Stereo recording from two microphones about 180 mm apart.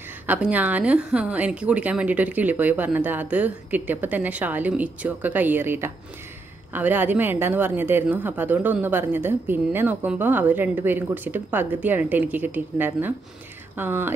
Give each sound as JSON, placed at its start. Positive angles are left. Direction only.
{"t": 0.3, "sound": "a woman's voice", "side_deg": -10}